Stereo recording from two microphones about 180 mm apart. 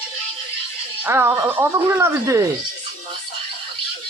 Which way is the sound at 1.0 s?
15° right (ahead or behind).